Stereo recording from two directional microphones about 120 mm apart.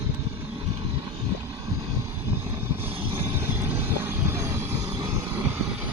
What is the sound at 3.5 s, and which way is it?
Vehicle, 20° right (ahead or behind).